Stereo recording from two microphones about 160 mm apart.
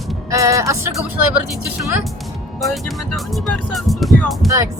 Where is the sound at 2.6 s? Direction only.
Centre (ahead or behind).